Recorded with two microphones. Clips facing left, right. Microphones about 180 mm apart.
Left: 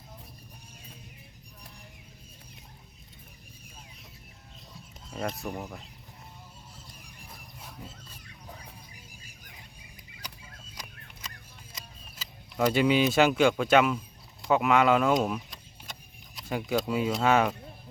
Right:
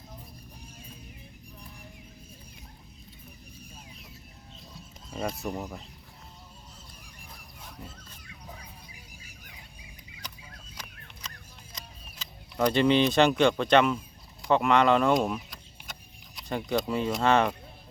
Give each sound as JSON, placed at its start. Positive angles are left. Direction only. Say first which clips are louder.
{"t": 5.1, "sound": "speech", "louder": "right 1 dB", "side_deg": 0}
{"t": 11.7, "sound": "speech", "louder": "right 1 dB", "side_deg": 5}